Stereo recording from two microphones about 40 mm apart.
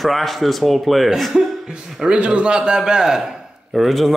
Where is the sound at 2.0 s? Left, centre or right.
Right; by 3.3 s centre.